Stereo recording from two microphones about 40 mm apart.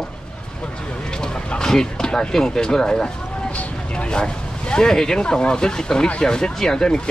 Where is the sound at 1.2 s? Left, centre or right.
Centre.